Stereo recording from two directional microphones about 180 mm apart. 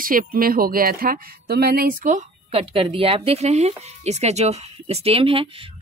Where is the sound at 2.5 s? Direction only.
30° right (ahead or behind).